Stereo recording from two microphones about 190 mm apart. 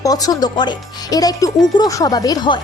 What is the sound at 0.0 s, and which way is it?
Speech, 20° left (ahead or behind).